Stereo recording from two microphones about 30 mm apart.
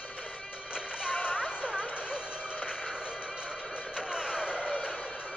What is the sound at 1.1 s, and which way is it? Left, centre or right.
Music, left.